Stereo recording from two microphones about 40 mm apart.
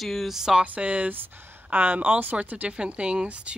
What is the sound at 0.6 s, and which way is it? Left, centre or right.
Speech, right.